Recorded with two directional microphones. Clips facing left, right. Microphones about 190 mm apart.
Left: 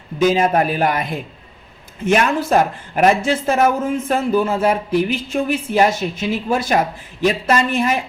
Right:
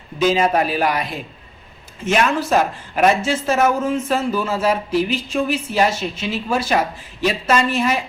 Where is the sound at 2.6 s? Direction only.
55° left (ahead or behind).